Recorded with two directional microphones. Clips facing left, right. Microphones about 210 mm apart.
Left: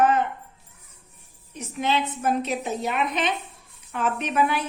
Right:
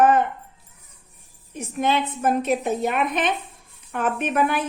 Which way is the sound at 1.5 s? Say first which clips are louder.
Right 3 dB; 50° right (ahead or behind).